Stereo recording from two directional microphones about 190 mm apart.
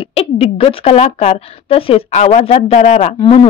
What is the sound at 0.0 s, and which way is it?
Speech, 30° left (ahead or behind).